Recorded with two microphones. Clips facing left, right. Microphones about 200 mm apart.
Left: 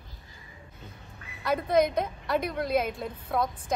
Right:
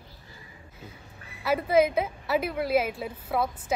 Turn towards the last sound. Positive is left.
turn(degrees=-5)  # may be behind; listen again after turning